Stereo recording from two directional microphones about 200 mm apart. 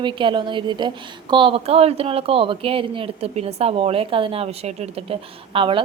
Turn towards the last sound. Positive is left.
turn(degrees=-25)  # may be behind; listen again after turning